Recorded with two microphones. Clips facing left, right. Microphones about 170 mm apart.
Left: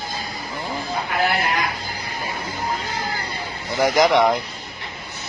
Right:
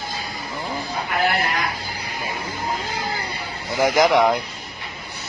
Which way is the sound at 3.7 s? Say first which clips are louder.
Even; 15° right (ahead or behind).